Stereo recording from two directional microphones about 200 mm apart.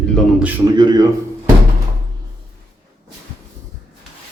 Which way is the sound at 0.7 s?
20° right (ahead or behind).